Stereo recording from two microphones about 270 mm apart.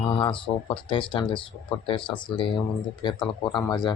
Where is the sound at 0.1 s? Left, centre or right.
Centre.